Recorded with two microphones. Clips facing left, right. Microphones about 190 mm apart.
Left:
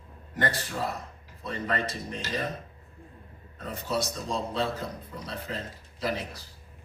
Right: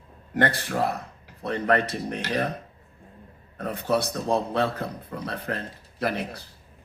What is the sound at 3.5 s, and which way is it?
A man's voice, 60° right (ahead or behind).